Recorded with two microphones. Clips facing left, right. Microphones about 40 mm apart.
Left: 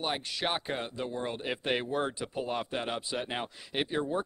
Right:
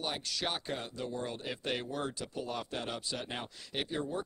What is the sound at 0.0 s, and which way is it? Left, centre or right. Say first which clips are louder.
Speech: left 4 dB; left.